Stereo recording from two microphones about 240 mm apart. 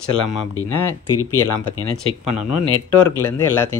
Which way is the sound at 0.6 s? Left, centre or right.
Left.